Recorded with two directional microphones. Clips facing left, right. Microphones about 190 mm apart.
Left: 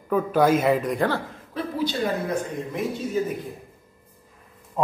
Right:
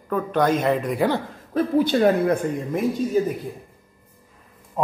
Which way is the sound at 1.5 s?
55° right (ahead or behind).